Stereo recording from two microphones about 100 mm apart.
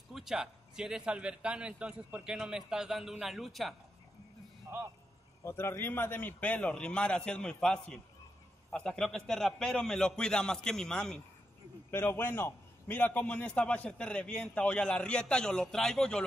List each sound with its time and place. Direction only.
0.1 s a man's voice: 5° right (ahead or behind)
4.6 s a man's voice: 20° right (ahead or behind)
5.4 s a man's voice: 25° left (ahead or behind); by 11.1 s 5° left (ahead or behind)
11.9 s a man's voice: 20° left (ahead or behind)